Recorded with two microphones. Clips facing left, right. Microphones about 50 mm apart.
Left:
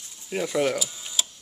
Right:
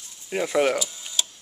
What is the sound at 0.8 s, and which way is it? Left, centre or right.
Tick-tock, centre.